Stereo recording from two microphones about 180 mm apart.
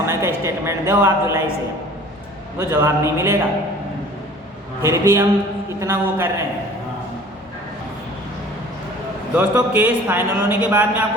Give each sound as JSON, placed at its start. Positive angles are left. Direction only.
{"t": 0.0, "sound": "a sound", "side_deg": -15}
{"t": 0.4, "sound": "a man's voice", "side_deg": -15}
{"t": 2.6, "sound": "a man's voice", "side_deg": -15}
{"t": 4.8, "sound": "a man's voice", "side_deg": -15}
{"t": 9.3, "sound": "a man's voice", "side_deg": -5}